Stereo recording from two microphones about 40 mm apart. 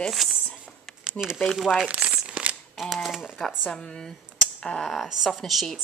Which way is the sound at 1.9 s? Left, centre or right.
Right.